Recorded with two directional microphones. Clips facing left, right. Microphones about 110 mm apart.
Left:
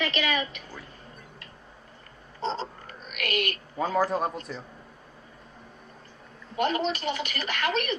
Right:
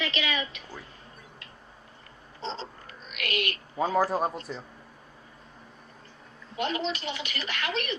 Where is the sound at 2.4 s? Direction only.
50° left (ahead or behind).